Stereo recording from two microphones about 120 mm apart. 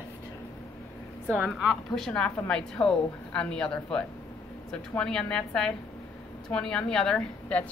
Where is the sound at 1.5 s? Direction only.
Centre (ahead or behind).